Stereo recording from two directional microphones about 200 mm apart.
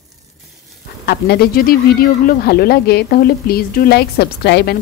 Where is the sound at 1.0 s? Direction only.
50° left (ahead or behind).